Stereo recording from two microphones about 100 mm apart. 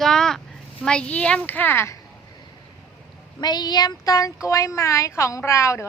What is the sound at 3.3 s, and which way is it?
Speech, 45° left (ahead or behind).